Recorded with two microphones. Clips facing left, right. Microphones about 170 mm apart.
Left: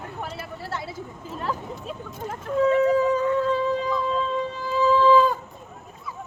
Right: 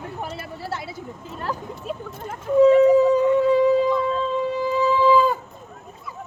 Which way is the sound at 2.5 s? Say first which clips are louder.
Right 6 dB; 15° right (ahead or behind).